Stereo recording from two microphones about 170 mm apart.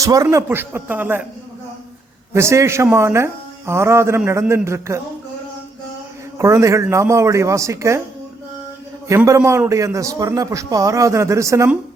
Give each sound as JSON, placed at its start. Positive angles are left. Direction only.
{"t": 0.0, "sound": "speech", "side_deg": -20}
{"t": 2.3, "sound": "speech", "side_deg": -15}
{"t": 6.4, "sound": "speech", "side_deg": -15}
{"t": 9.0, "sound": "a man's voice", "side_deg": -20}